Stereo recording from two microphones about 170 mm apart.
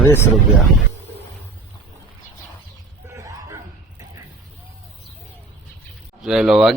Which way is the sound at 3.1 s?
20° right (ahead or behind).